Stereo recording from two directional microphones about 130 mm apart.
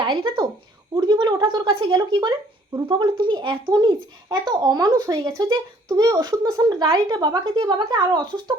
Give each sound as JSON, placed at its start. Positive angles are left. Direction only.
{"t": 0.9, "sound": "a child's voice", "side_deg": -35}